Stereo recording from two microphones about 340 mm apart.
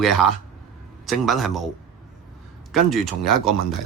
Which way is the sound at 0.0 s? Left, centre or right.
Centre.